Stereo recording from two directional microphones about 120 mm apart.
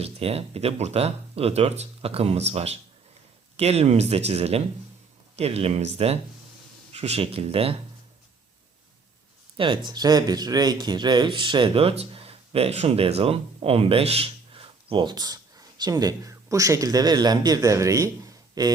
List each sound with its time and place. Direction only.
0.0 s speech: 55° right (ahead or behind)
9.6 s speech: 50° right (ahead or behind)
9.9 s speech: 35° right (ahead or behind)